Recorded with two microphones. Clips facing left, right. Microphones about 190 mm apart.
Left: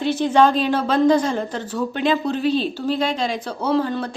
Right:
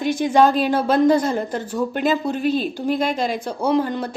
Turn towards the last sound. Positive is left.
turn(degrees=-15)  # may be behind; listen again after turning